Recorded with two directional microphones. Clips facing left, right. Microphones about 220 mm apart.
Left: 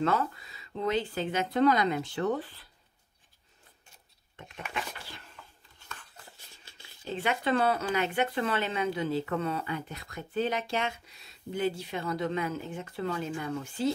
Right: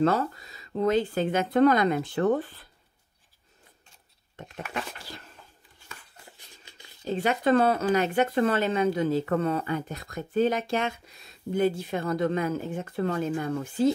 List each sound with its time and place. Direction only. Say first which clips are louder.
0.0 s speech: right 5 dB; 40° right (ahead or behind)
4.4 s speech: right 5 dB; 40° right (ahead or behind)
5.9 s a sound: even; 15° right (ahead or behind)
7.1 s speech: right 6 dB; 40° right (ahead or behind)